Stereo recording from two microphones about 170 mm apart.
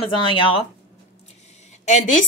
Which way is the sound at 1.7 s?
45° left (ahead or behind).